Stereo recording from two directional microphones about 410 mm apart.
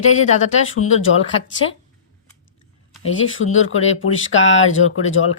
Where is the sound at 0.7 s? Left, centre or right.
Left.